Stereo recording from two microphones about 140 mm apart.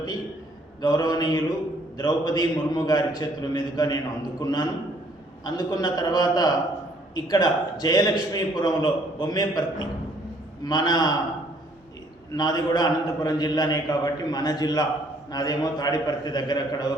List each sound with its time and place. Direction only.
0.8 s a man's voice: 30° left (ahead or behind)
12.3 s a man's voice: 30° left (ahead or behind)